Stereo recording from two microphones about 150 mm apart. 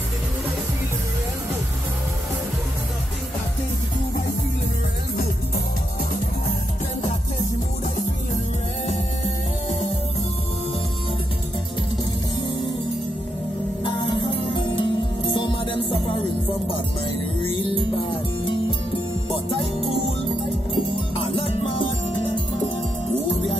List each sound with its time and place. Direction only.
8.8 s music: 45° left (ahead or behind)
13.8 s music: 35° left (ahead or behind)
19.3 s music: 40° left (ahead or behind)
21.4 s music: 40° left (ahead or behind)